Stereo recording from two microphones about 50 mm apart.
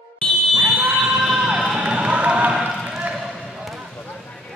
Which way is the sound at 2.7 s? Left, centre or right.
Centre.